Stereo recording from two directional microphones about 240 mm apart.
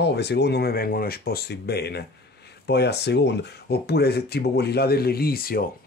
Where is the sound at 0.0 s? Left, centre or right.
Left.